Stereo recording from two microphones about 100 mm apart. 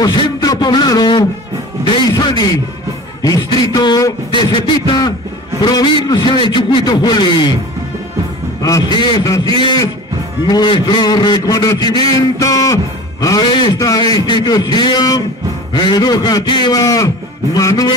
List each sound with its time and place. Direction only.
0.0 s a man's voice: 45° left (ahead or behind)
8.6 s a man's voice: 35° left (ahead or behind)
10.4 s a man's voice: 50° left (ahead or behind)
16.8 s a man's voice: 35° left (ahead or behind)